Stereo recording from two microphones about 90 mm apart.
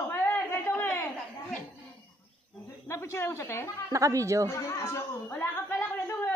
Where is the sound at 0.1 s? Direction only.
25° left (ahead or behind).